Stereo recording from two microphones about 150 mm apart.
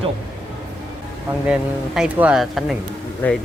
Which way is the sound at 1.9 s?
5° right (ahead or behind).